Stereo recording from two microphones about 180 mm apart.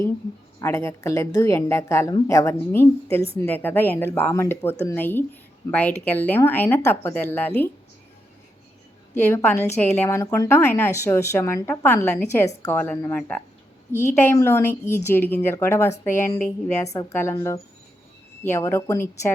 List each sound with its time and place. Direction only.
0.6 s a woman's voice: 15° left (ahead or behind)
9.1 s a woman's voice: 10° left (ahead or behind)
18.4 s a woman's voice: 15° left (ahead or behind)